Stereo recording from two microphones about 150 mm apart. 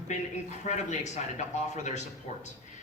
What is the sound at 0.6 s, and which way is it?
Speech, 50° left (ahead or behind).